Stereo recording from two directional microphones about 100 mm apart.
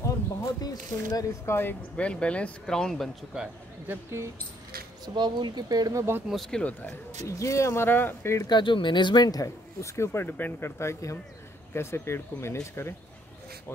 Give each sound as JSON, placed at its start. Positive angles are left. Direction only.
{"t": 0.0, "sound": "a sound", "side_deg": 30}
{"t": 1.1, "sound": "speech", "side_deg": 25}
{"t": 2.0, "sound": "speech", "side_deg": 10}
{"t": 3.8, "sound": "speech", "side_deg": -25}
{"t": 5.0, "sound": "speech", "side_deg": -50}
{"t": 6.2, "sound": "speech", "side_deg": 0}
{"t": 6.6, "sound": "speech", "side_deg": 15}
{"t": 7.2, "sound": "speech", "side_deg": 30}
{"t": 8.5, "sound": "speech", "side_deg": 50}